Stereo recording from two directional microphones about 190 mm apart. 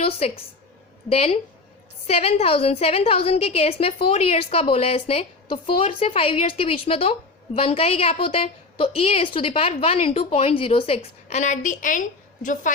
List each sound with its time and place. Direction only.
1.1 s a woman's voice: 30° left (ahead or behind)